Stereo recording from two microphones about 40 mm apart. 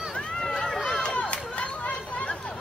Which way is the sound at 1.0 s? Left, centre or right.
Left.